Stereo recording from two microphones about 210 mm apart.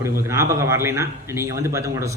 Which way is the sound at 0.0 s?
15° right (ahead or behind).